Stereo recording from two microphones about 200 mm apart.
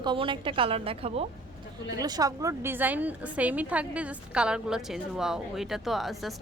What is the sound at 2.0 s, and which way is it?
A woman's voice, 20° right (ahead or behind).